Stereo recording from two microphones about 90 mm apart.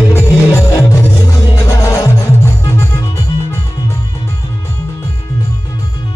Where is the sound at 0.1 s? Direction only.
30° left (ahead or behind).